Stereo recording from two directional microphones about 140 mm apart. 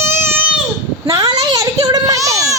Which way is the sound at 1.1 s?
25° right (ahead or behind).